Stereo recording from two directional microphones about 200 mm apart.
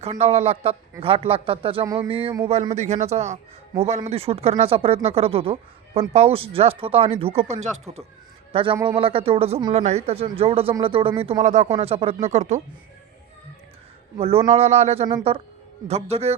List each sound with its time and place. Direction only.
0.0 s a man's voice: 30° right (ahead or behind)
14.2 s a man's voice: 30° right (ahead or behind)